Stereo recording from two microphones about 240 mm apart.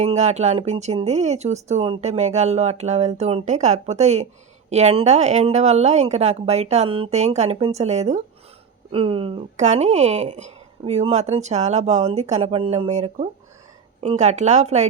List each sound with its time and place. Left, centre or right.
0.0 s speech: right